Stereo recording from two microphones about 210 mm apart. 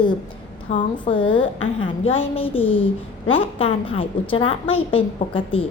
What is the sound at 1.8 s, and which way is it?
A woman's voice, 25° left (ahead or behind).